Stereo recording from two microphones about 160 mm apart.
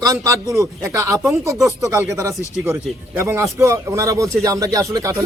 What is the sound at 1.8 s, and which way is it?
Speech, 20° right (ahead or behind).